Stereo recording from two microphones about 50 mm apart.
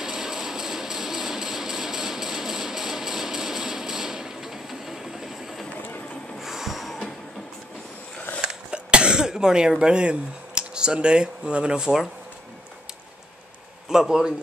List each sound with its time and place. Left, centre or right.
0.0 s vehicle: centre
6.4 s train: centre
8.4 s cough: centre
13.8 s speech: centre